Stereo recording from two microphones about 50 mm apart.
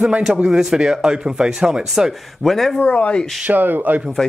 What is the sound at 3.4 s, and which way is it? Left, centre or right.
Speech, right.